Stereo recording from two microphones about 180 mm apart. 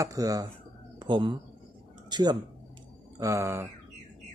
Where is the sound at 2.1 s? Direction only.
25° right (ahead or behind).